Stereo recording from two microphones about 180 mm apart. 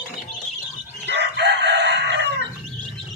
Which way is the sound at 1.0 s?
70° right (ahead or behind).